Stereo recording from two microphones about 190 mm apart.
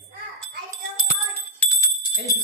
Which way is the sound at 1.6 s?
15° left (ahead or behind).